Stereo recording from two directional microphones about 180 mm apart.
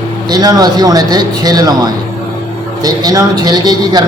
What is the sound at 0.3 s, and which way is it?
A man's voice, 20° right (ahead or behind).